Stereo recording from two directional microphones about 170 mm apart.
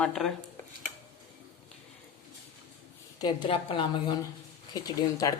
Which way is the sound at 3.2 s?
25° left (ahead or behind).